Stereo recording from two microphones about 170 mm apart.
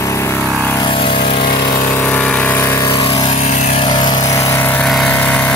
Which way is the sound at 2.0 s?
10° left (ahead or behind).